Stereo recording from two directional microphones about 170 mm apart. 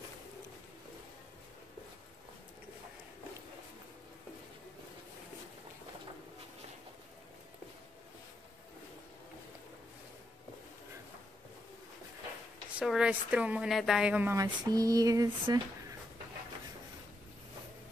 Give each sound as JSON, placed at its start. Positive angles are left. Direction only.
{"t": 12.7, "sound": "speech", "side_deg": -5}
{"t": 14.3, "sound": "speech", "side_deg": -20}